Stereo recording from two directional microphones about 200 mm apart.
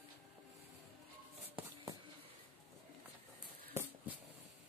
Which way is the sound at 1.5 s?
15° right (ahead or behind).